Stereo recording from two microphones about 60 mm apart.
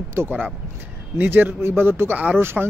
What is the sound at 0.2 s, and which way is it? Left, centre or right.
Speech, right.